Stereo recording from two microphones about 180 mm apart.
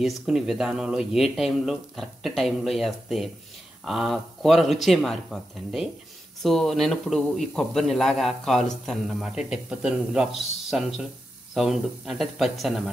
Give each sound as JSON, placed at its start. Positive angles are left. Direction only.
{"t": 0.0, "sound": "a man's voice", "side_deg": 0}